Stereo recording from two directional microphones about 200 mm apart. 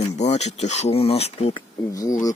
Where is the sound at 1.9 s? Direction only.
15° left (ahead or behind).